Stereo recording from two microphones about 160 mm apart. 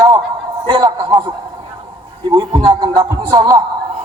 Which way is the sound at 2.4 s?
30° right (ahead or behind).